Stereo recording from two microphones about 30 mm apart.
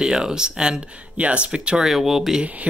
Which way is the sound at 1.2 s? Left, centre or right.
Right.